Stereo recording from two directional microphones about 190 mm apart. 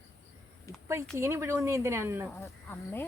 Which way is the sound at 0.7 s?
15° left (ahead or behind).